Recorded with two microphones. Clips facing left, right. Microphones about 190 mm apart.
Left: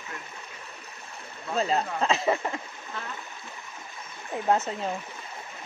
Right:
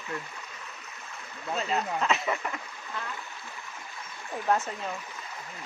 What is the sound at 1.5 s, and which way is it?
Speech, 35° left (ahead or behind).